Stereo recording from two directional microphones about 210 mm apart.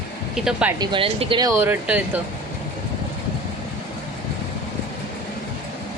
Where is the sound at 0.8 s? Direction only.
25° right (ahead or behind); by 2.0 s 10° right (ahead or behind).